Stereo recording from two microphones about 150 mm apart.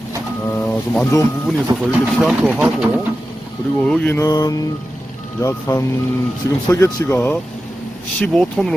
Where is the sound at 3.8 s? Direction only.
5° left (ahead or behind).